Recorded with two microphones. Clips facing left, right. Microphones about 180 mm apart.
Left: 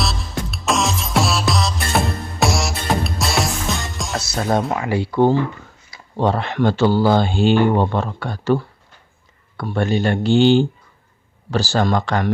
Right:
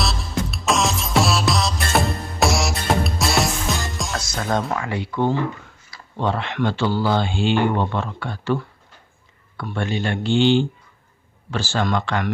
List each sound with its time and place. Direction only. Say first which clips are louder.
0.0 s music: even; centre (ahead or behind)
4.7 s speech: left 4 dB; 25° left (ahead or behind); by 12.3 s 40° left (ahead or behind)